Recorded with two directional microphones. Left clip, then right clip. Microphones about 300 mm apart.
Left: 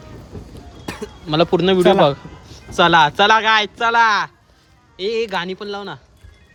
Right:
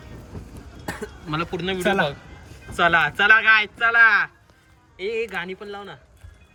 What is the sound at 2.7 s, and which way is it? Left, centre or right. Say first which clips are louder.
Speech: left 6 dB; centre.